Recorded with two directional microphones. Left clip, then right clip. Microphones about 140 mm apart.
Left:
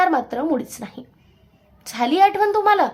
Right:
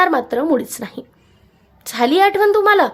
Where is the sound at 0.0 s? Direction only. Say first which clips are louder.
Right 3 dB; 30° right (ahead or behind).